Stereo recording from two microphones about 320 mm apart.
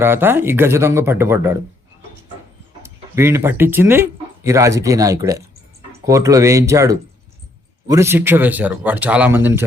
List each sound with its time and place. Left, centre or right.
0.0 s speech: centre
2.8 s speech: centre